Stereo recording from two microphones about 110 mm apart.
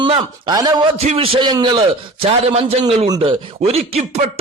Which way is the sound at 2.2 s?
65° right (ahead or behind).